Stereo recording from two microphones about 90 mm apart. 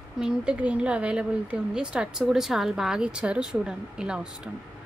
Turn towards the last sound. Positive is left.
turn(degrees=-10)  # may be behind; listen again after turning